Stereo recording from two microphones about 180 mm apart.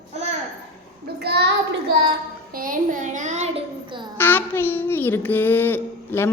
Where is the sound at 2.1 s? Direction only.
50° right (ahead or behind); by 4.0 s 30° right (ahead or behind).